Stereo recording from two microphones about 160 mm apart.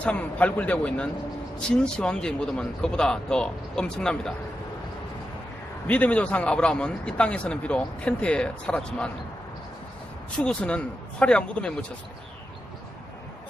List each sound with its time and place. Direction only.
0.0 s a man's voice: 10° left (ahead or behind)
5.9 s a man's voice: 10° left (ahead or behind)
10.4 s a man's voice: 5° left (ahead or behind)